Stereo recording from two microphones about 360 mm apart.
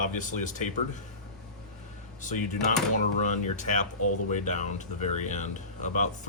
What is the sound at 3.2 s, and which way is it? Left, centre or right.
Speech, centre.